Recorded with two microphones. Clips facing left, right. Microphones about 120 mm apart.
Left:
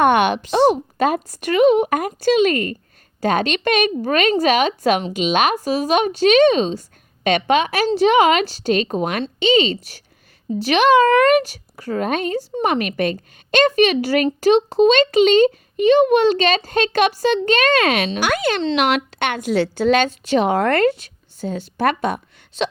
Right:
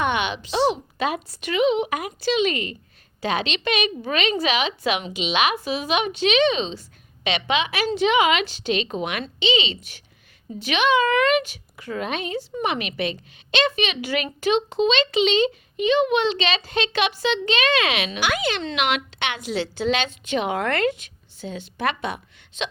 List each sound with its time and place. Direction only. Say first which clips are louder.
0.0 s a child's voice: left 9 dB; 50° left (ahead or behind)